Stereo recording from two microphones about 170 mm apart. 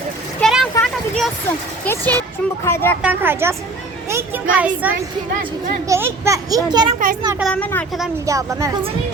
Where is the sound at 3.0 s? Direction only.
10° right (ahead or behind).